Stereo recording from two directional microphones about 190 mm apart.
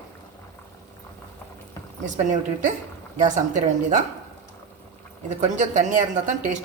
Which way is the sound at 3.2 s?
40° right (ahead or behind).